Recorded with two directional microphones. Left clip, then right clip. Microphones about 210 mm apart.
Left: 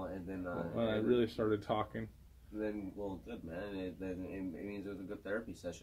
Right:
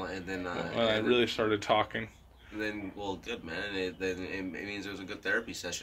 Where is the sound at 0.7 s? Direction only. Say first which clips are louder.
Right 6 dB; 10° left (ahead or behind).